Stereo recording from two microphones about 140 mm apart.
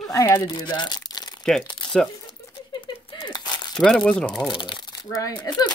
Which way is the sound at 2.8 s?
35° left (ahead or behind).